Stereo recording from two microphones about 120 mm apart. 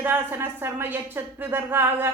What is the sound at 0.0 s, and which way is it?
A woman's voice, 20° right (ahead or behind).